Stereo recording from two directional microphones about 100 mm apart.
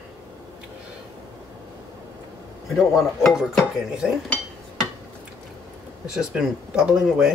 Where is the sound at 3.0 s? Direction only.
Centre (ahead or behind).